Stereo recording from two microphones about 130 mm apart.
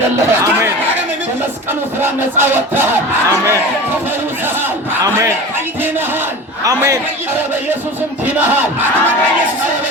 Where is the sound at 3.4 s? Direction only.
15° right (ahead or behind).